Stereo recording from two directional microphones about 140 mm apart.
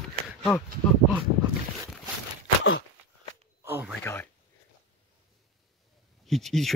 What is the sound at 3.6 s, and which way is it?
Speech, 15° right (ahead or behind).